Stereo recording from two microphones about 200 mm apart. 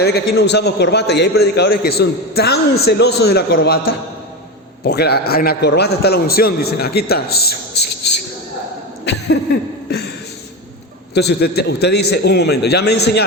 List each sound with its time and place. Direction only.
0.0 s a man's voice: 55° left (ahead or behind)
11.1 s a man's voice: 55° left (ahead or behind)